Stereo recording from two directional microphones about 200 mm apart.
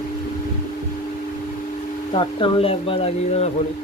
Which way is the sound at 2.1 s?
25° left (ahead or behind).